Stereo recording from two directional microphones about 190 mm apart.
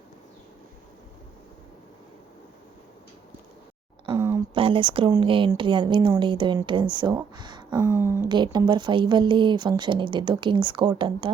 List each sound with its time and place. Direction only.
4.0 s a sound: 20° right (ahead or behind)
4.5 s speech: 25° right (ahead or behind)
7.8 s speech: 10° right (ahead or behind)
8.3 s speech: 25° right (ahead or behind)